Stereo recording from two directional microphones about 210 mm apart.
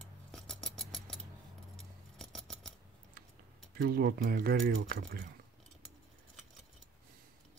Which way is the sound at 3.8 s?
45° right (ahead or behind).